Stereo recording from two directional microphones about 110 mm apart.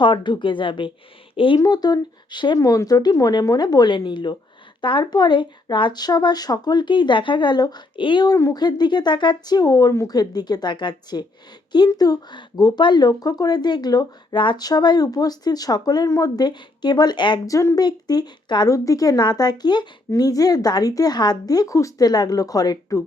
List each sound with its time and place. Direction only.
0.0 s speech: 45° left (ahead or behind)
1.5 s a woman's voice: 35° left (ahead or behind)
2.6 s a woman's voice: 35° left (ahead or behind)
8.4 s speech: 30° left (ahead or behind)
8.6 s a woman's voice: 40° left (ahead or behind)